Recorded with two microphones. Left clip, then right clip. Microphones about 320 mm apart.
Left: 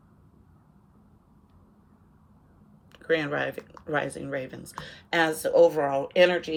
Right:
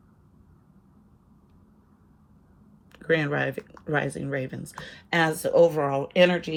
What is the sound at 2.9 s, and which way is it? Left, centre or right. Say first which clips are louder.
Speech: right 2 dB; centre.